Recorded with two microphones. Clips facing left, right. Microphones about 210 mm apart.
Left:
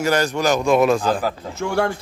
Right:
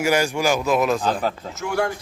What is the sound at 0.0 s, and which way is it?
Speech, 10° right (ahead or behind).